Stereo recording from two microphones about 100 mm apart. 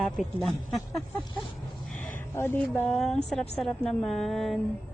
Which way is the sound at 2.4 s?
20° left (ahead or behind).